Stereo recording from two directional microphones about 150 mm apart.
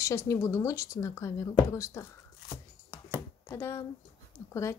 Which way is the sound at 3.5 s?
15° left (ahead or behind).